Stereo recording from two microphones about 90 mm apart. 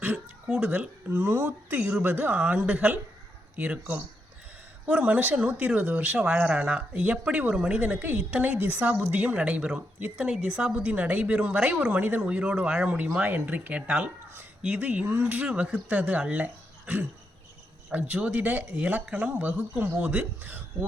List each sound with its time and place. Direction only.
0.4 s a woman's voice: 10° right (ahead or behind)